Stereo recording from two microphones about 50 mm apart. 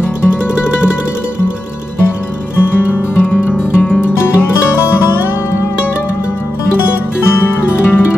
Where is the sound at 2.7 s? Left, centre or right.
Left.